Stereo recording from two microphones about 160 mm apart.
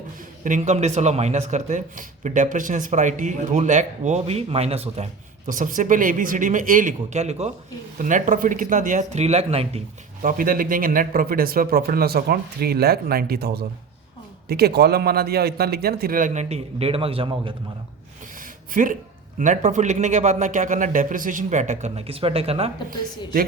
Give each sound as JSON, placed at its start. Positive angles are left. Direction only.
{"t": 0.4, "sound": "a man's voice", "side_deg": -50}
{"t": 5.5, "sound": "speech", "side_deg": -55}
{"t": 7.9, "sound": "a man's voice", "side_deg": -55}
{"t": 10.2, "sound": "speech", "side_deg": -60}
{"t": 18.3, "sound": "a sound", "side_deg": -60}
{"t": 19.4, "sound": "a man's voice", "side_deg": -50}
{"t": 22.9, "sound": "speech", "side_deg": -65}